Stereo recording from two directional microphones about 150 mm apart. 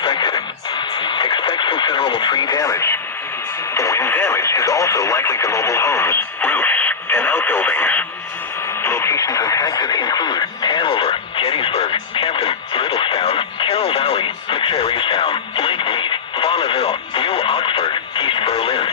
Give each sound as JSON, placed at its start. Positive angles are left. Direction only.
{"t": 0.0, "sound": "radio", "side_deg": 35}
{"t": 3.8, "sound": "speech", "side_deg": 20}